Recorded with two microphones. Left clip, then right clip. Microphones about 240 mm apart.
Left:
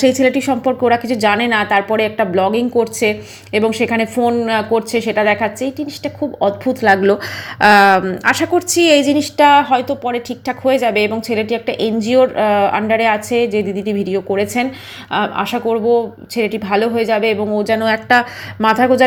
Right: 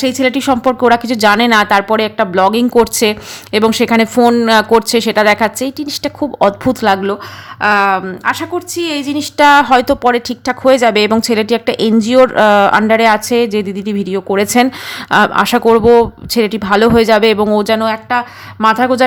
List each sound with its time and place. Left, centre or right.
0.0 s a woman's voice: centre
6.9 s speech: centre
9.4 s a woman's voice: right
17.8 s speech: centre
18.7 s speech: centre